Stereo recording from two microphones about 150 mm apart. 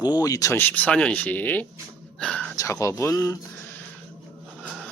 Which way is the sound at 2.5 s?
20° left (ahead or behind).